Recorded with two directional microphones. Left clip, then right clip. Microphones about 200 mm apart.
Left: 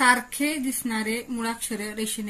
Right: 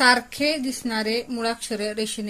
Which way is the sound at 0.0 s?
35° right (ahead or behind).